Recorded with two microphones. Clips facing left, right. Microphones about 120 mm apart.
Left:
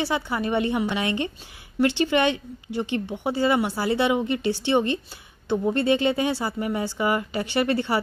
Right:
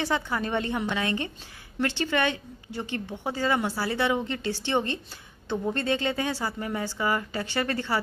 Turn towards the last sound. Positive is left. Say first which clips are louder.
# left 5 dB
turn(degrees=15)  # may be behind; listen again after turning